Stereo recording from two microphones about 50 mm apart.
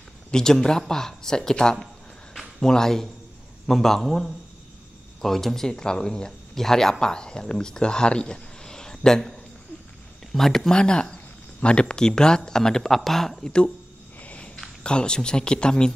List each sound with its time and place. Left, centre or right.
0.3 s a man's voice: centre
10.3 s speech: centre
14.2 s walk: left
14.8 s speech: centre